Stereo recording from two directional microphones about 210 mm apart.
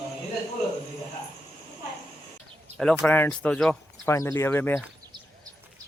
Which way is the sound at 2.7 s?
5° left (ahead or behind).